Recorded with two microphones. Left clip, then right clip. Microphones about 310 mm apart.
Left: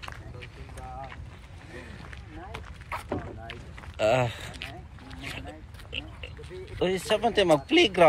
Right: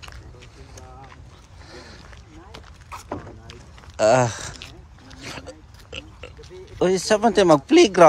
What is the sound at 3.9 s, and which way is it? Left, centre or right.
Speech, right.